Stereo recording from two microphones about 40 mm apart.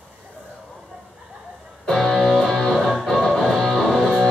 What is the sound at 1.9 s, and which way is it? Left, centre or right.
Music, centre.